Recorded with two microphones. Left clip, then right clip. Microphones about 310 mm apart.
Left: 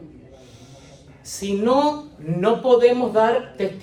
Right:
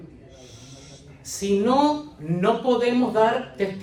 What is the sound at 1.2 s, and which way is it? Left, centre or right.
Speech, centre.